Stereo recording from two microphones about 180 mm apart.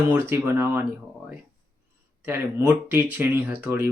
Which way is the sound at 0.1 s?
15° right (ahead or behind).